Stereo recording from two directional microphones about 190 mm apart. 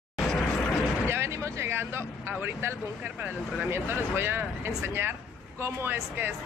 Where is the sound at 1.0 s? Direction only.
15° right (ahead or behind).